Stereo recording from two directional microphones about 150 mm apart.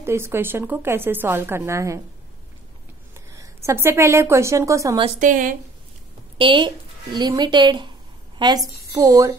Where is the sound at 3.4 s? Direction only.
15° right (ahead or behind).